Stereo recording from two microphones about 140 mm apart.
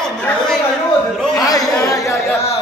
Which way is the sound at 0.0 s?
5° left (ahead or behind).